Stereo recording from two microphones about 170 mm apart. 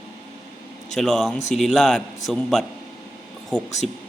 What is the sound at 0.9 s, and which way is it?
A man's voice, centre (ahead or behind).